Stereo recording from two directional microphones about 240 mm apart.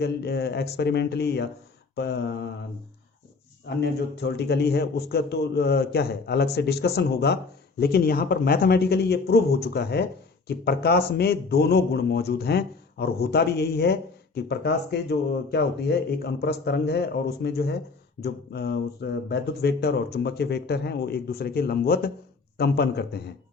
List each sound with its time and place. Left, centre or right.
0.0 s speech: left
3.8 s speech: left